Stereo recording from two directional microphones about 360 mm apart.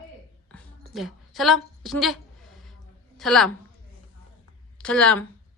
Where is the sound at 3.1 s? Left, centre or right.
Centre.